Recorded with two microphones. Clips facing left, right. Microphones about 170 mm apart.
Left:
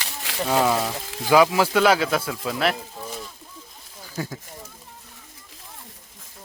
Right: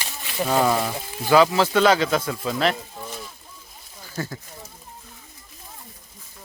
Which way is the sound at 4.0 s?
10° left (ahead or behind).